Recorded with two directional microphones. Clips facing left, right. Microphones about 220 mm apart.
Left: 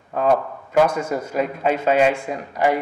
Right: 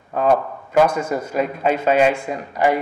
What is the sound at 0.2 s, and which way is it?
A man's voice, 20° right (ahead or behind).